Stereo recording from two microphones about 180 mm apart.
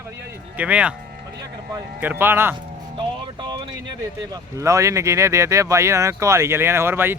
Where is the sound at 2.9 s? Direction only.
25° right (ahead or behind).